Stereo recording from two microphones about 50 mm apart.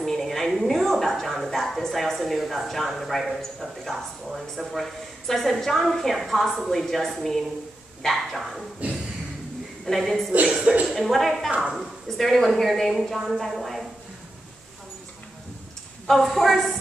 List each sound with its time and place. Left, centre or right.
0.0 s a woman's voice: centre
9.8 s a woman's voice: centre
10.5 s speech: right
11.0 s a woman's voice: centre
16.3 s a woman's voice: centre